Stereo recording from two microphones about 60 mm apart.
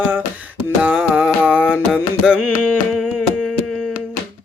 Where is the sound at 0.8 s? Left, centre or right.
Centre.